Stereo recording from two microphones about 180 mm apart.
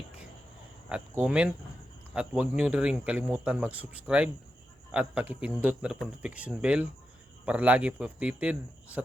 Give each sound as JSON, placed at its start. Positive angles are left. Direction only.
{"t": 0.9, "sound": "speech", "side_deg": -5}